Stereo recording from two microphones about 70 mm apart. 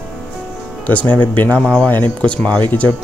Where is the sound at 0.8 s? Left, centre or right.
Left.